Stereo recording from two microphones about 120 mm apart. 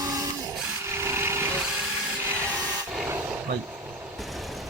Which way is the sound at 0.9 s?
20° right (ahead or behind).